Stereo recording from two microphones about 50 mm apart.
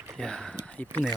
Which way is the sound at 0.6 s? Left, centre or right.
Left.